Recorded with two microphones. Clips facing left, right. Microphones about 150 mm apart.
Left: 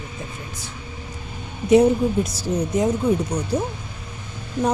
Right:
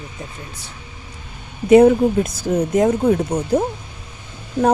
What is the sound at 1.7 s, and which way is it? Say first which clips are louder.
Speech: right 5 dB; 55° right (ahead or behind).